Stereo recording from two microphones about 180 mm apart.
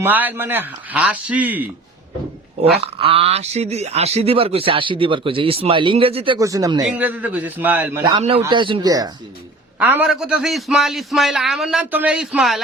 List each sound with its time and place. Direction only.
0.0 s a man's voice: 10° right (ahead or behind)
2.8 s speech: 30° right (ahead or behind)
6.4 s speech: 20° right (ahead or behind)
6.8 s a man's voice: 10° right (ahead or behind)
8.4 s speech: 25° right (ahead or behind)
9.7 s a man's voice: 10° right (ahead or behind)